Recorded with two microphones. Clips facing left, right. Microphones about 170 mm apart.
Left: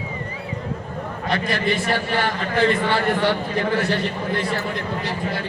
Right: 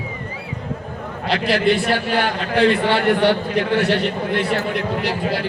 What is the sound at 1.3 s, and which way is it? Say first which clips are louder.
A man's voice: right 5 dB; 75° right (ahead or behind).